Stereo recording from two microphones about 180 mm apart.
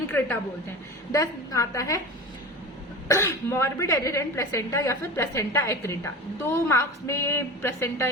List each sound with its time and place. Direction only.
1.1 s a woman's voice: 20° left (ahead or behind)
3.1 s a woman's voice: 15° left (ahead or behind)